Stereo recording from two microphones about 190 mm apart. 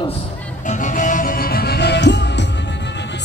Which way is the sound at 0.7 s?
40° left (ahead or behind).